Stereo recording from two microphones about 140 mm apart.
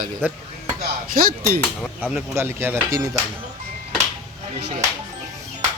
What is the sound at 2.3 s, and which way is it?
Speech, 15° right (ahead or behind).